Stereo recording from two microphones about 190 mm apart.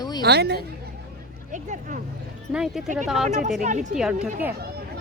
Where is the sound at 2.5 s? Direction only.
5° right (ahead or behind).